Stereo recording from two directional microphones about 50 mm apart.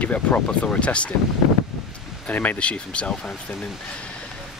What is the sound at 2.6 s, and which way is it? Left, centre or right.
Speech, left.